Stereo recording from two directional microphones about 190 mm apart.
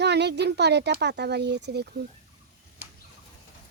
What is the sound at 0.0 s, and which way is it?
Speech, 60° right (ahead or behind).